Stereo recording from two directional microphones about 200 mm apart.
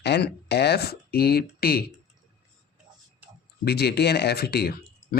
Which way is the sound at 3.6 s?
55° left (ahead or behind).